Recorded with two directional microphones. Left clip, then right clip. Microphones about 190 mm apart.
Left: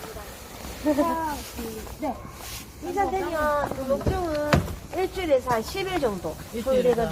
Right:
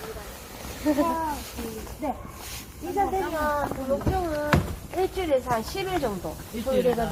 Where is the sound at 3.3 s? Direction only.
30° left (ahead or behind).